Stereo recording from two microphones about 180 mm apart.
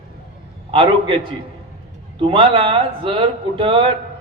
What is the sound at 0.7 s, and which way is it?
A man's voice, 30° right (ahead or behind).